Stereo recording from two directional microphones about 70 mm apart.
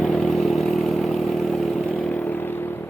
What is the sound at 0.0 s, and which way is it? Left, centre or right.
Vehicle, centre.